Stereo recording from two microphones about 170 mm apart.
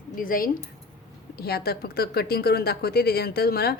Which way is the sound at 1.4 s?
65° left (ahead or behind).